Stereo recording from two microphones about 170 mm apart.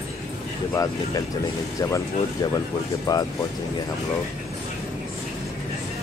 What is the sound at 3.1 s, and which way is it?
Speech, 20° left (ahead or behind).